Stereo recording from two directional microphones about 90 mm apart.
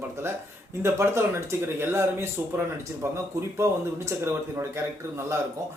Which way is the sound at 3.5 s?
30° right (ahead or behind).